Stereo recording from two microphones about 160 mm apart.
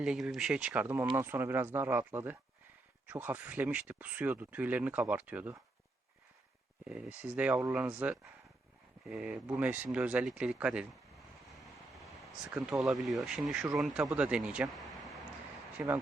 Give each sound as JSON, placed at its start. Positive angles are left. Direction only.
{"t": 0.0, "sound": "speech", "side_deg": -5}
{"t": 6.8, "sound": "speech", "side_deg": -5}
{"t": 11.5, "sound": "vehicle", "side_deg": 0}
{"t": 12.5, "sound": "speech", "side_deg": -15}
{"t": 12.8, "sound": "speech", "side_deg": 0}